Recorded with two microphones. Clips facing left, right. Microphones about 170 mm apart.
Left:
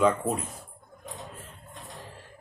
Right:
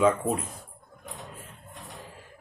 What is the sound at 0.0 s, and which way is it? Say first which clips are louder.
Speech: right 1 dB; centre (ahead or behind).